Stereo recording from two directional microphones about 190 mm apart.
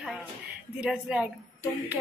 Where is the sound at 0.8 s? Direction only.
5° right (ahead or behind).